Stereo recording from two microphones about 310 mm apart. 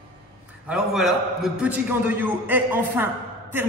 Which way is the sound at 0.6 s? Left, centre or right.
Centre.